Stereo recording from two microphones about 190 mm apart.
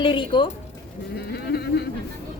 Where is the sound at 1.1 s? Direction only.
55° left (ahead or behind).